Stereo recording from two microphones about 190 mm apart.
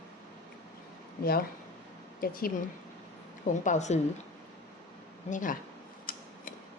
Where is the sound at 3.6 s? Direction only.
40° left (ahead or behind).